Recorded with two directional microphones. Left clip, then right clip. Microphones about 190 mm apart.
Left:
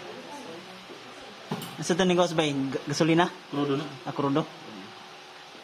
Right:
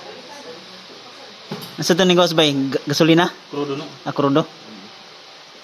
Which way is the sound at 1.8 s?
25° right (ahead or behind).